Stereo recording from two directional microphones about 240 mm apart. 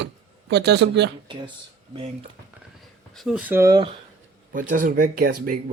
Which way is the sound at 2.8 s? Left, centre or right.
Centre.